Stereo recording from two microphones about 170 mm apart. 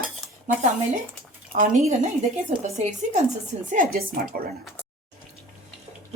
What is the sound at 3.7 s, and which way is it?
Speech, 55° right (ahead or behind).